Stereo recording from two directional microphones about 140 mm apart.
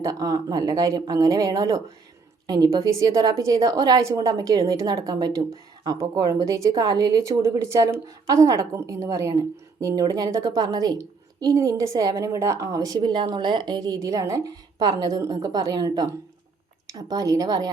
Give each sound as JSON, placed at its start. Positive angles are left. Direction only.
{"t": 0.0, "sound": "a woman's voice", "side_deg": -25}